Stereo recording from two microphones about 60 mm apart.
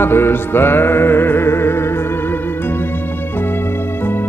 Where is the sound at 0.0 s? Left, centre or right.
Left.